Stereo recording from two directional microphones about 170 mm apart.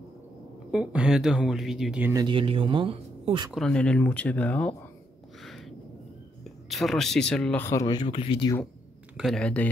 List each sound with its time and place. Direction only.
0.7 s speech: 5° right (ahead or behind)
2.1 s speech: 30° right (ahead or behind)
3.5 s speech: 5° left (ahead or behind)
5.4 s a sound: centre (ahead or behind)
6.4 s speech: centre (ahead or behind)
7.6 s speech: 20° left (ahead or behind)
9.1 s speech: centre (ahead or behind)